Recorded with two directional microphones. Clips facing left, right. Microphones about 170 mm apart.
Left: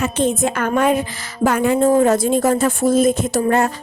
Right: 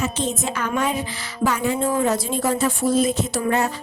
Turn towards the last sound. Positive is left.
turn(degrees=50)  # may be behind; listen again after turning